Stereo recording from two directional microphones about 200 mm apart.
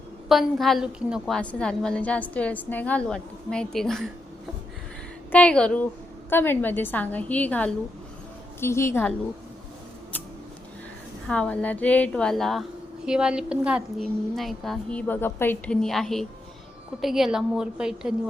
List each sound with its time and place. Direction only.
0.3 s a woman's voice: centre (ahead or behind)
5.3 s a woman's voice: 5° left (ahead or behind)
11.3 s a woman's voice: 5° left (ahead or behind)